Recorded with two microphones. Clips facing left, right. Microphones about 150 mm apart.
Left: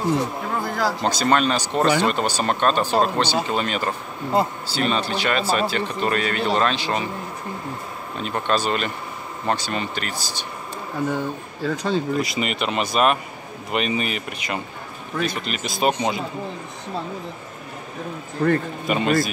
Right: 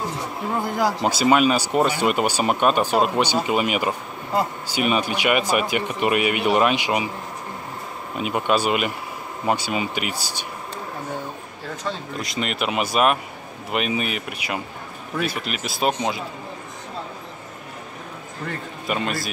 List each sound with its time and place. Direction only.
0.6 s speech: 20° right (ahead or behind)
1.0 s speech: 10° right (ahead or behind)
8.2 s speech: 10° right (ahead or behind)
11.6 s speech: 90° left
12.2 s speech: 5° left (ahead or behind)
18.4 s a man's voice: 65° left (ahead or behind)
18.9 s speech: centre (ahead or behind)